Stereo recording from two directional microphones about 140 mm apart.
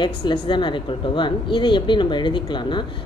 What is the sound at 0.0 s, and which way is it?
A woman's voice, 35° left (ahead or behind).